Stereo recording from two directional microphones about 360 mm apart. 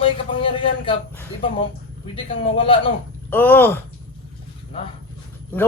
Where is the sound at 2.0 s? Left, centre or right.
Centre.